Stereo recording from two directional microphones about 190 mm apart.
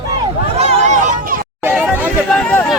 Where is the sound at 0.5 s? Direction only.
35° right (ahead or behind).